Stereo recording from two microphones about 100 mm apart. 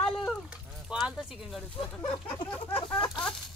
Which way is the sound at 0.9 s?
5° right (ahead or behind).